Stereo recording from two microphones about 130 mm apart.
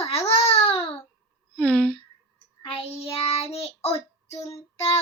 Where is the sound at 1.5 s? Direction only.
10° left (ahead or behind).